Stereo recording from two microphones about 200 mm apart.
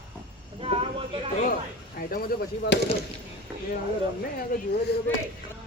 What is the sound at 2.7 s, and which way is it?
Speech, 60° left (ahead or behind).